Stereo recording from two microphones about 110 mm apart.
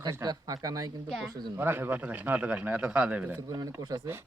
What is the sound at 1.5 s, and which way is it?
A man's voice, 20° right (ahead or behind).